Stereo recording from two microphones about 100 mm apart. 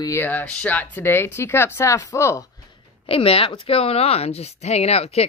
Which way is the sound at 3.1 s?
70° left (ahead or behind).